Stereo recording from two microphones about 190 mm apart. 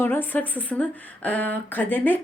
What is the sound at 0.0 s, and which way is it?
Speech, 10° left (ahead or behind).